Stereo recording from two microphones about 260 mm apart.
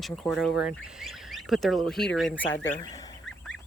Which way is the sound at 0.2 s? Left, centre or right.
Centre.